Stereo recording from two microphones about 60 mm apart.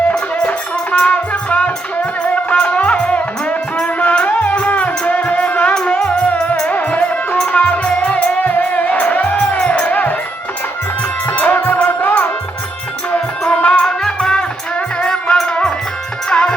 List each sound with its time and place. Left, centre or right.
0.1 s music: left
5.7 s music: centre
11.3 s music: left
13.1 s music: centre
13.8 s music: centre